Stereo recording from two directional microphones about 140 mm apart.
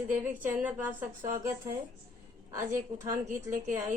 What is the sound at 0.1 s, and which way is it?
Mantra, 10° right (ahead or behind).